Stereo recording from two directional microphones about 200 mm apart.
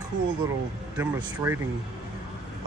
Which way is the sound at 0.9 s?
10° right (ahead or behind).